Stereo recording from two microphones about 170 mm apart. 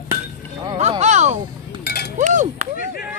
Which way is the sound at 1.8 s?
70° left (ahead or behind).